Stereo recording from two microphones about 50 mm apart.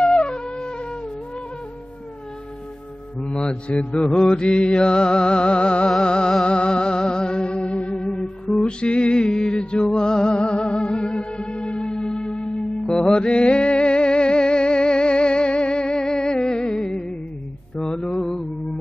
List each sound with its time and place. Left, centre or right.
0.0 s wind instrument: centre
3.2 s music: centre
17.8 s mantra: centre